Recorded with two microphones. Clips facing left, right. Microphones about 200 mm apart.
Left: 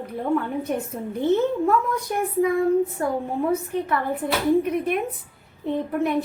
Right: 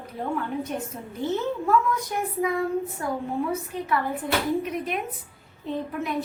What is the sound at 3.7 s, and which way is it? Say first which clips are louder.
Speech: left 3 dB; 60° left (ahead or behind).